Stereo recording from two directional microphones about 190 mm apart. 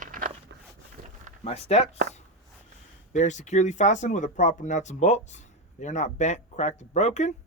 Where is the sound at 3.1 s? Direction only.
40° left (ahead or behind).